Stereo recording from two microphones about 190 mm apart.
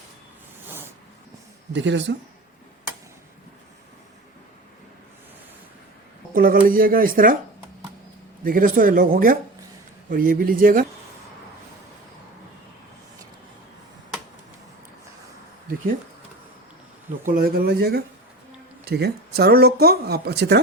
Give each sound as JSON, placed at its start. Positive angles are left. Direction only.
{"t": 0.7, "sound": "zipper", "side_deg": -10}
{"t": 1.7, "sound": "speech", "side_deg": -70}
{"t": 6.3, "sound": "a man's voice", "side_deg": -50}
{"t": 8.4, "sound": "speech", "side_deg": -45}
{"t": 17.2, "sound": "speech", "side_deg": -50}